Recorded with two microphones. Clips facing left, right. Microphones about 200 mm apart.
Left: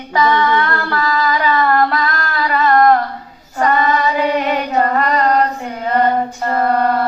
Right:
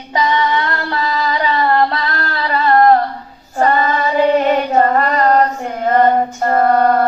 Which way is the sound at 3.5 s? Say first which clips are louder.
Right 1 dB; 40° right (ahead or behind).